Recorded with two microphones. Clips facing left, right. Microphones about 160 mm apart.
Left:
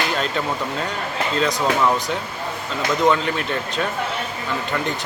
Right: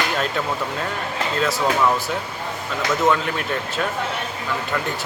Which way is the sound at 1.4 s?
5° right (ahead or behind).